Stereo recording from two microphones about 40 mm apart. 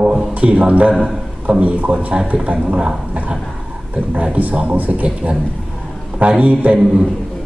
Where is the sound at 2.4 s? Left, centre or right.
Right.